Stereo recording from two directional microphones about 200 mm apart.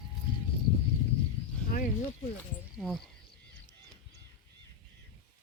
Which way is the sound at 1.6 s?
45° left (ahead or behind).